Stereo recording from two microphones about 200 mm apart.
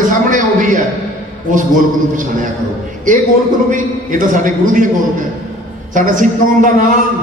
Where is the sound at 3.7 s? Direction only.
40° right (ahead or behind).